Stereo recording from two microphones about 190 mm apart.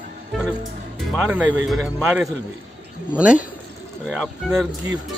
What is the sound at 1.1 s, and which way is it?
A man's voice, 5° right (ahead or behind).